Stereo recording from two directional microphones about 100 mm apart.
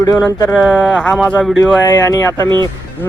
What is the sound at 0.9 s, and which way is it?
Mantra, 5° left (ahead or behind).